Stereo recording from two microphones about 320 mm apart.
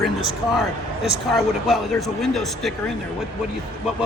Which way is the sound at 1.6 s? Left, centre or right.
Centre.